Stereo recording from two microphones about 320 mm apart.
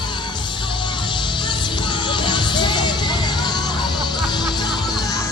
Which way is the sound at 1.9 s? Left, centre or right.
Centre.